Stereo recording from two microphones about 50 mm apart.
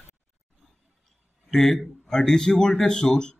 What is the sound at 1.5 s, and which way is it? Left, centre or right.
A man's voice, centre.